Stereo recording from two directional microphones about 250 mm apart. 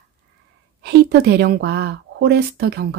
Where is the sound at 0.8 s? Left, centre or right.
Right.